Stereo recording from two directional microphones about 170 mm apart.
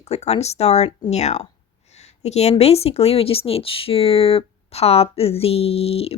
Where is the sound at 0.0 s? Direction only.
40° left (ahead or behind).